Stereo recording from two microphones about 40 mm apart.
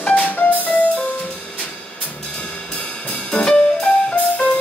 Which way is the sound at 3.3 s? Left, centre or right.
Left.